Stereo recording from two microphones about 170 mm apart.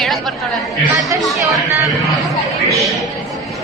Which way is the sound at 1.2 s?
Centre (ahead or behind).